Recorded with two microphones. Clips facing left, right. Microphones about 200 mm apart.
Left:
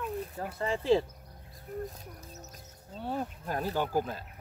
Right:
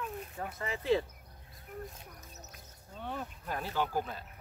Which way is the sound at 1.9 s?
35° left (ahead or behind).